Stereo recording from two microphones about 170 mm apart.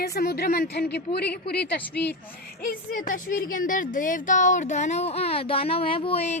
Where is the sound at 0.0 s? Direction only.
65° left (ahead or behind).